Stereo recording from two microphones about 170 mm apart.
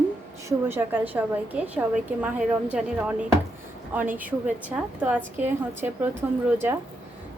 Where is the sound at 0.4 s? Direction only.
15° right (ahead or behind).